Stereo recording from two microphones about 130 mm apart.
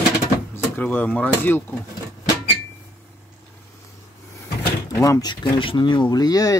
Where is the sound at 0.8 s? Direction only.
15° left (ahead or behind).